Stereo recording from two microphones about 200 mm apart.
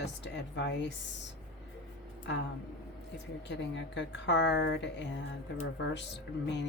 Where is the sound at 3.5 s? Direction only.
60° left (ahead or behind).